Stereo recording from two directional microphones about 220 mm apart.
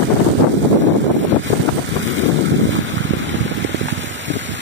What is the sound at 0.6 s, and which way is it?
Boat, 55° right (ahead or behind).